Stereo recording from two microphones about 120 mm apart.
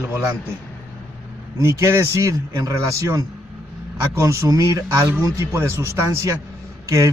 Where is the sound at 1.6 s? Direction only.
25° right (ahead or behind).